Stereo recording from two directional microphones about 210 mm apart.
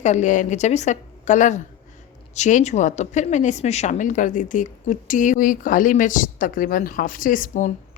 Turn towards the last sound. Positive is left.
turn(degrees=40)  # may be behind; listen again after turning